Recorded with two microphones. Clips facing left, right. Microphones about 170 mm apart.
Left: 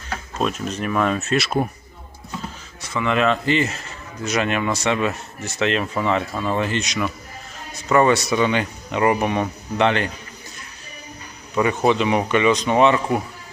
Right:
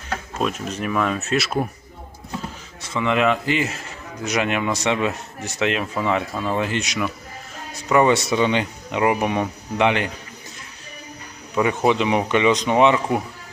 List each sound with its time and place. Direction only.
0.3 s speech: 5° right (ahead or behind)
2.9 s speech: 15° right (ahead or behind)
9.0 s speech: 10° right (ahead or behind)
11.5 s speech: 10° right (ahead or behind)